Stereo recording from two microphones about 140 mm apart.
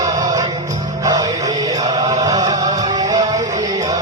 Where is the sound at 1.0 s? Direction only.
25° right (ahead or behind).